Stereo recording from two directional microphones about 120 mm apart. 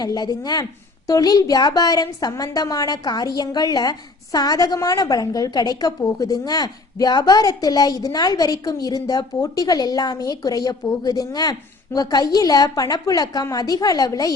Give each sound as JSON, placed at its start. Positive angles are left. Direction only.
{"t": 0.0, "sound": "a woman's voice", "side_deg": 35}